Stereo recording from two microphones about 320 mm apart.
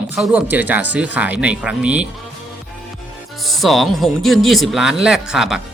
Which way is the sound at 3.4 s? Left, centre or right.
Centre.